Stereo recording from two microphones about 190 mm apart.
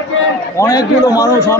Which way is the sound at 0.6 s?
15° left (ahead or behind).